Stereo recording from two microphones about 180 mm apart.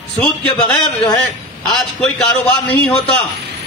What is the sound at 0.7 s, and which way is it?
Speech, 25° left (ahead or behind).